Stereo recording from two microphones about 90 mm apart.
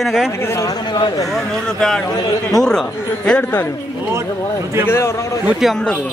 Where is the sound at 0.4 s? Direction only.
35° left (ahead or behind).